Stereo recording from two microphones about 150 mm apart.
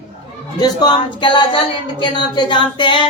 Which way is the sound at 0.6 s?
30° left (ahead or behind).